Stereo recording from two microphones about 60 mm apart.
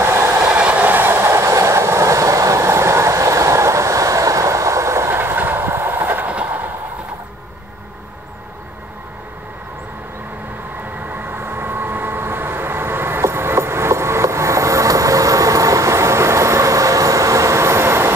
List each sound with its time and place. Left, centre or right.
0.0 s train: right
0.4 s train: centre
11.1 s vehicle: right